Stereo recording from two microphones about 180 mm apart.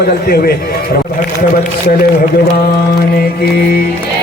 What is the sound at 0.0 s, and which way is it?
Music, 60° left (ahead or behind).